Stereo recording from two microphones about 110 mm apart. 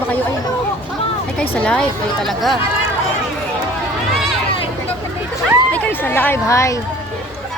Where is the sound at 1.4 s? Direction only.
10° left (ahead or behind).